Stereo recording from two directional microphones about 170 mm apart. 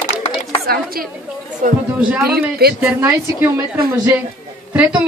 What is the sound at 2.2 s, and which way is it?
Speech, 65° right (ahead or behind).